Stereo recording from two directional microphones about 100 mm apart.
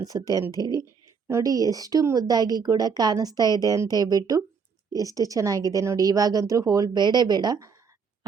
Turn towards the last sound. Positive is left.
turn(degrees=-45)  # may be behind; listen again after turning